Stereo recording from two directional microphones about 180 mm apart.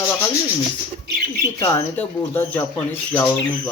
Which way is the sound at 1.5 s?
15° left (ahead or behind).